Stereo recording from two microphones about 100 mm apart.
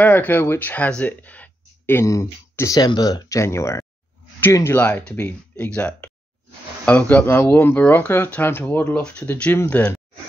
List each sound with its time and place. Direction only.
0.0 s speech: 20° left (ahead or behind)
4.7 s speech: 15° left (ahead or behind)